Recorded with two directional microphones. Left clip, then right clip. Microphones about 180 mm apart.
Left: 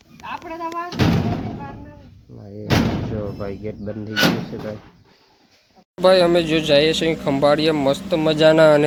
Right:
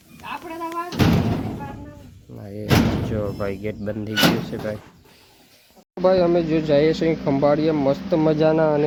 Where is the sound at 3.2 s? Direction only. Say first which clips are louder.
Right 2 dB; 10° right (ahead or behind).